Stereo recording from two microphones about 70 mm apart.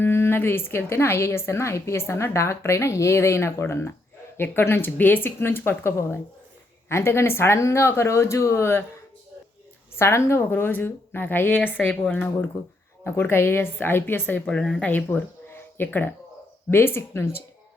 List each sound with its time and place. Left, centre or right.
0.0 s a woman's voice: left
10.0 s a woman's voice: left
10.5 s a woman's voice: left
13.1 s a woman's voice: left
14.4 s a woman's voice: centre
14.8 s a woman's voice: left